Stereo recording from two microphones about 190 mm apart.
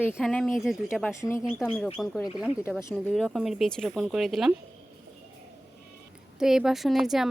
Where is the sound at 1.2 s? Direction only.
15° left (ahead or behind).